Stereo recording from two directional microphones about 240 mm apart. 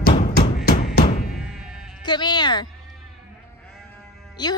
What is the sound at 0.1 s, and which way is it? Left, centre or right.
Music, left.